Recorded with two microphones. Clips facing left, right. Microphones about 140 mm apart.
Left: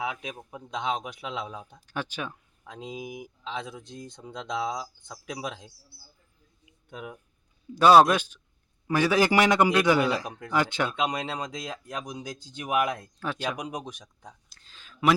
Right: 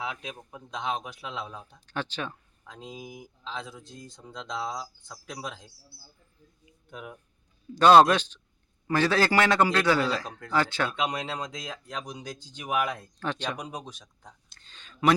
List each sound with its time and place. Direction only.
0.0 s speech: 15° left (ahead or behind)
7.8 s a man's voice: 10° left (ahead or behind)
14.5 s a sound: 5° left (ahead or behind)